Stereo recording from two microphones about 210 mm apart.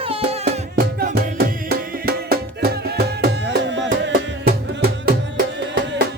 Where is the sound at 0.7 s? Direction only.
50° right (ahead or behind).